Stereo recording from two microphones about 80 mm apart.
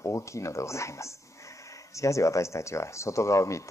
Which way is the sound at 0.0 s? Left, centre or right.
Left.